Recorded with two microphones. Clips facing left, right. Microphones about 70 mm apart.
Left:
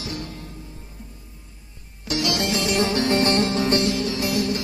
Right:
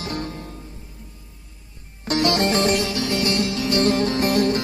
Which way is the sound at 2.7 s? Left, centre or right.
Left.